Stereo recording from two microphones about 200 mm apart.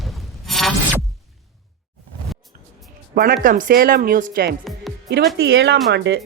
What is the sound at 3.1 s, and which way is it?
Speech, 45° right (ahead or behind).